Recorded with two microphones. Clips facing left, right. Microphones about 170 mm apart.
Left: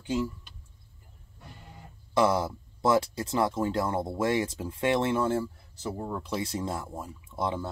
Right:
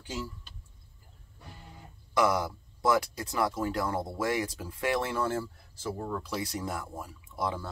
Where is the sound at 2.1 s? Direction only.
25° left (ahead or behind).